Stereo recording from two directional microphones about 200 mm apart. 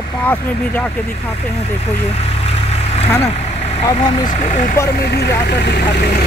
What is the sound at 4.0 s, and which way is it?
Speech, 30° left (ahead or behind).